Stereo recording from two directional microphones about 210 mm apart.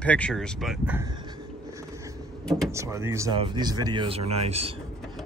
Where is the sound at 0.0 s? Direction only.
5° left (ahead or behind).